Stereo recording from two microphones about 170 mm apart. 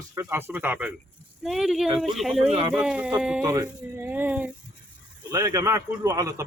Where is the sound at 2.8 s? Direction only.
5° right (ahead or behind).